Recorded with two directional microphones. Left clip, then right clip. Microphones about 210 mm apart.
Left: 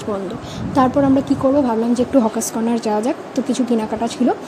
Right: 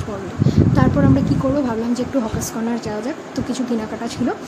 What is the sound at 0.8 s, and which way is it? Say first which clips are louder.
A woman's voice: left 6 dB; 20° left (ahead or behind).